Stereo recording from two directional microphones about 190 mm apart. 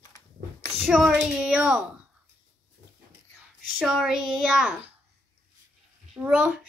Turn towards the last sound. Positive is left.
turn(degrees=-5)  # may be behind; listen again after turning